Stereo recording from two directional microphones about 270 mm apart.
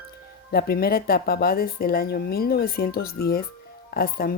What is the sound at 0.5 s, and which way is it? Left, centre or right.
Speech, left.